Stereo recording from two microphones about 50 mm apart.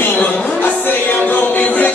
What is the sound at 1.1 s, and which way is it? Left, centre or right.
Music, left.